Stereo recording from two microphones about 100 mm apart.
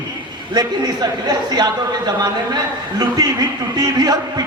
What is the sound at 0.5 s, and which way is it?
A man's voice, 45° right (ahead or behind).